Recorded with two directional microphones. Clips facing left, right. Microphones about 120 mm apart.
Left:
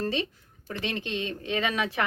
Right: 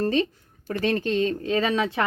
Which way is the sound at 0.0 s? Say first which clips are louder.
Right 6 dB; 45° right (ahead or behind).